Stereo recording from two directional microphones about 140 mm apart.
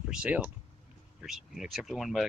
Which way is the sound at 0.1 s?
10° right (ahead or behind).